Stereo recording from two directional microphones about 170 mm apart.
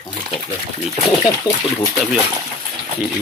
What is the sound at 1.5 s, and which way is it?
Speech, 25° left (ahead or behind).